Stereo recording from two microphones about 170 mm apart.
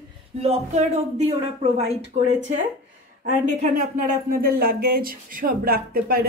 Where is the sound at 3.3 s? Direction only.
50° right (ahead or behind).